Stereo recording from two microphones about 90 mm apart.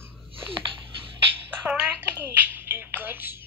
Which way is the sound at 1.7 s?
10° right (ahead or behind).